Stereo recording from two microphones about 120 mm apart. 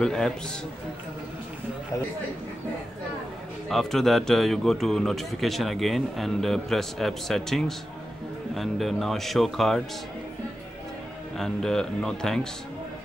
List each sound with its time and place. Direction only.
0.0 s speech: 5° left (ahead or behind)
3.6 s speech: 5° left (ahead or behind)
11.3 s speech: 5° left (ahead or behind)